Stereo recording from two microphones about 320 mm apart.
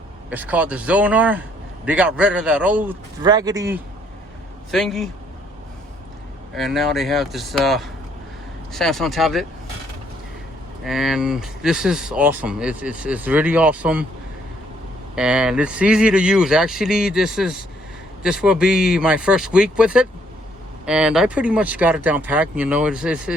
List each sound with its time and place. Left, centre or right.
0.3 s a man's voice: centre
4.7 s a man's voice: centre
6.5 s a man's voice: centre
10.8 s a man's voice: centre
15.1 s a man's voice: centre